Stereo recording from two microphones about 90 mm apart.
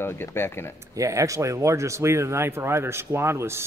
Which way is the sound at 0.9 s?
35° right (ahead or behind).